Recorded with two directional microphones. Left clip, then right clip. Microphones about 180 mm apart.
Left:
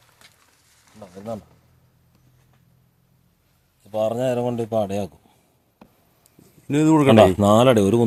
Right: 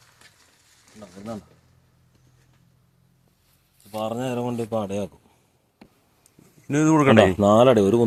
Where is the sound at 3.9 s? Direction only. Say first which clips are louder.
Left 6 dB; 55° left (ahead or behind).